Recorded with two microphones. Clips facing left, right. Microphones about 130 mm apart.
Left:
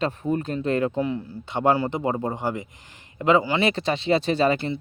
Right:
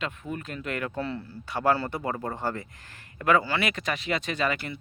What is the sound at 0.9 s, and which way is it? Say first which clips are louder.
Speech: left 6 dB; 15° left (ahead or behind).